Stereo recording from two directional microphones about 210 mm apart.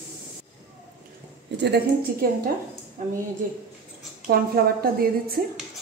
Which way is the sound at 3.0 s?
35° right (ahead or behind).